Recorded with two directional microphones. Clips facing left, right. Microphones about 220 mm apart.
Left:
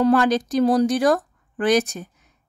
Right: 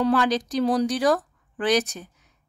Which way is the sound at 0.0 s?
50° left (ahead or behind).